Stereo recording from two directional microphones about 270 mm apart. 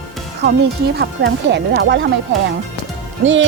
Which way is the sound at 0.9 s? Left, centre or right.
Right.